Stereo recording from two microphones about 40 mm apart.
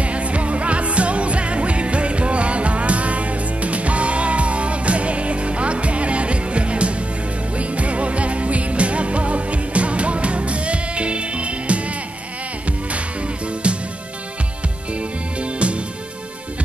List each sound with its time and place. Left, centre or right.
0.0 s music: right
13.6 s music: right
15.0 s music: right